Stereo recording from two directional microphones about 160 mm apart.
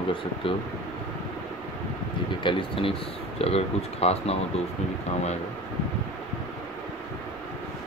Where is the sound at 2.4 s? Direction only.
35° left (ahead or behind).